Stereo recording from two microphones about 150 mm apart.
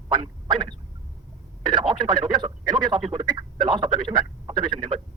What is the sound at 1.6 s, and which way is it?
Speech, 30° right (ahead or behind).